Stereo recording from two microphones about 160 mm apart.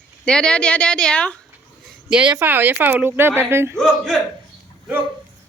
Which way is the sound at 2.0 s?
5° right (ahead or behind).